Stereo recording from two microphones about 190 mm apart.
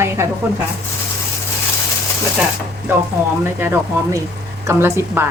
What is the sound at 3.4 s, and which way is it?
A woman's voice, 10° right (ahead or behind).